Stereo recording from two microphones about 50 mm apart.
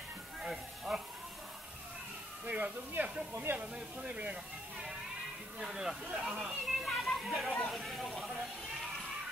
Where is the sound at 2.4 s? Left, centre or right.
Right.